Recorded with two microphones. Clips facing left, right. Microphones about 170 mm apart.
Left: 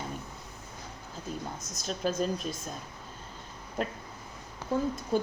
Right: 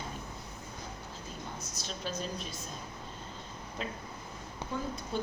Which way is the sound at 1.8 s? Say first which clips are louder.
Left 9 dB; 45° left (ahead or behind).